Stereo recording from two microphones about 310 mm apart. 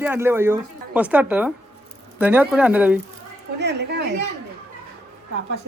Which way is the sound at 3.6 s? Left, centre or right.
Right.